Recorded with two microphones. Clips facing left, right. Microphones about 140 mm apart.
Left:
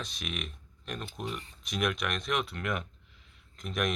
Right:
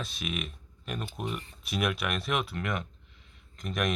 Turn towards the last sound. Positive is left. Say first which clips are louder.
# right 1 dB
turn(degrees=0)  # may be behind; listen again after turning